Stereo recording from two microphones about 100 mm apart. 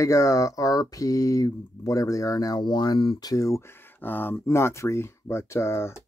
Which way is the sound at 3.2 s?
35° left (ahead or behind).